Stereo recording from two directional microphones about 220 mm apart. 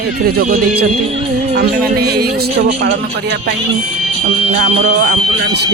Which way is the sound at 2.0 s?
45° right (ahead or behind).